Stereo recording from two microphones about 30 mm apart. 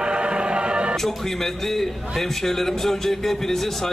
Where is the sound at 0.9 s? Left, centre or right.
Centre.